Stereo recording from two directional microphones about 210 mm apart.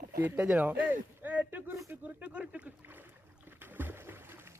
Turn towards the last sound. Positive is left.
turn(degrees=-10)  # may be behind; listen again after turning